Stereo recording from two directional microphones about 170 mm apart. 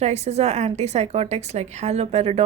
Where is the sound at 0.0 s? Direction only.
40° right (ahead or behind).